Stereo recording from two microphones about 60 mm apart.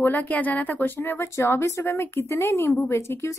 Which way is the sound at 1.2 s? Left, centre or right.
Left.